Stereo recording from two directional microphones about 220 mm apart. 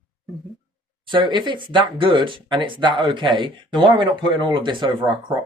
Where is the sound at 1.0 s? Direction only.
20° right (ahead or behind).